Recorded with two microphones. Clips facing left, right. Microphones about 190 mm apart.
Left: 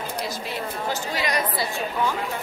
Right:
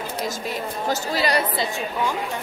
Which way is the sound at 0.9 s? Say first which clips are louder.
Right 5 dB; 35° right (ahead or behind).